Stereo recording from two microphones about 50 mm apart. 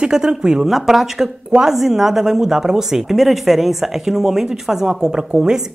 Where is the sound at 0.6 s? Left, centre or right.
Centre.